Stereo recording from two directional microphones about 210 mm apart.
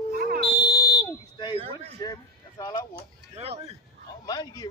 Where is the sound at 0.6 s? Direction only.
20° left (ahead or behind).